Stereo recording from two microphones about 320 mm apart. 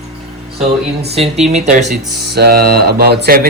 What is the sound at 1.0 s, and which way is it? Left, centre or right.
Speech, centre.